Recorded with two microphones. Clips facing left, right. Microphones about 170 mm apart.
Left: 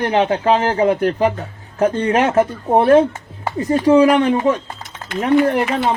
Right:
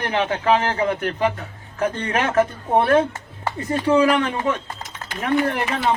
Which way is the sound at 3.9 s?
15° left (ahead or behind).